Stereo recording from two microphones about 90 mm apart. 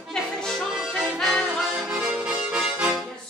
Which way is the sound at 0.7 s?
5° right (ahead or behind).